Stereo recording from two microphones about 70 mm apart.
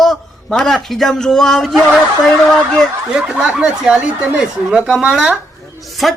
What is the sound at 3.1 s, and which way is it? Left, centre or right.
Speech, centre.